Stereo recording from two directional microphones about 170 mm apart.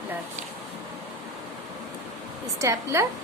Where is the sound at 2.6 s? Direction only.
15° right (ahead or behind).